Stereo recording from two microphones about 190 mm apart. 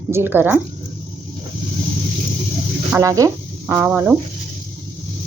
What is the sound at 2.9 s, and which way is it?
A woman's voice, 15° right (ahead or behind).